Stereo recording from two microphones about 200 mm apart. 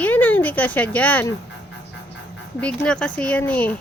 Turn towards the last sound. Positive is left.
turn(degrees=5)  # may be behind; listen again after turning